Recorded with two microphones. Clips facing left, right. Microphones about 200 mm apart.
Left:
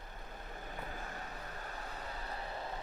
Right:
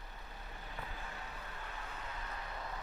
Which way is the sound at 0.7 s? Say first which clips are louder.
Left 2 dB; 45° left (ahead or behind).